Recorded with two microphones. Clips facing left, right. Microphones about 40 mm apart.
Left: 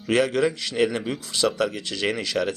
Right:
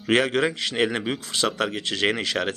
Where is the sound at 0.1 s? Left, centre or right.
Right.